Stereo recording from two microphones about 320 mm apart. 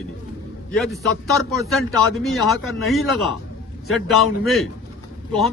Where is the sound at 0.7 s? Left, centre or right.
Centre.